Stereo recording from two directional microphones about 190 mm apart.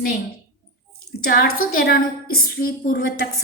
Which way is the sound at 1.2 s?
50° left (ahead or behind).